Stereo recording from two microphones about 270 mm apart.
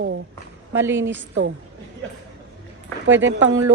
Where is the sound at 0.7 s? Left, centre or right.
Centre.